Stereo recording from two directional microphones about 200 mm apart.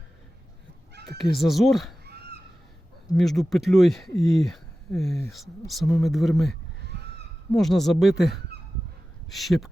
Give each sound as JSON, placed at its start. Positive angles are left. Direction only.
{"t": 1.2, "sound": "speech", "side_deg": 0}
{"t": 2.0, "sound": "honk", "side_deg": -55}
{"t": 3.2, "sound": "speech", "side_deg": 0}